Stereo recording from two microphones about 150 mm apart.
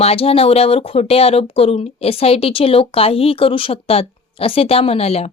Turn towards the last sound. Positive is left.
turn(degrees=45)  # may be behind; listen again after turning